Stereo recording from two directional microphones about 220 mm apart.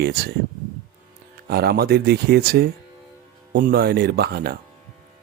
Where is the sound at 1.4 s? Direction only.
45° right (ahead or behind).